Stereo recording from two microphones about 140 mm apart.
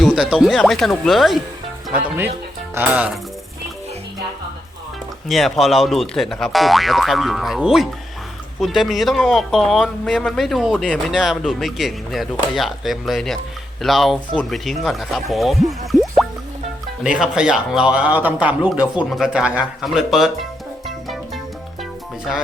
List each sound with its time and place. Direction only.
0.0 s speech: 5° right (ahead or behind)
1.9 s speech: 15° right (ahead or behind)
5.3 s speech: centre (ahead or behind)
15.9 s music: centre (ahead or behind)
17.0 s speech: 5° right (ahead or behind)
20.8 s music: centre (ahead or behind)